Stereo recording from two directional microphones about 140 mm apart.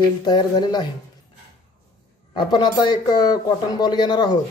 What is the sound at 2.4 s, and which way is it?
Speech, 30° left (ahead or behind).